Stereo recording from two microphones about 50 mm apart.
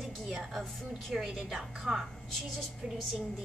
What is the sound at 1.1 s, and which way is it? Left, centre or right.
Speech, centre.